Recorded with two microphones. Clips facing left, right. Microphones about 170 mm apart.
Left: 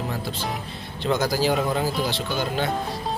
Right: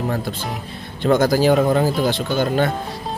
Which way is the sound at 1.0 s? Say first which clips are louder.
Right 7 dB; 50° right (ahead or behind).